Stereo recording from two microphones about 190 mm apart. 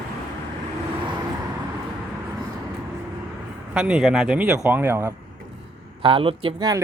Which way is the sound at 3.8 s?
5° right (ahead or behind).